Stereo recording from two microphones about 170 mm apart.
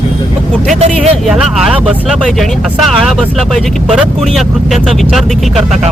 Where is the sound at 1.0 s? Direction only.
Centre (ahead or behind).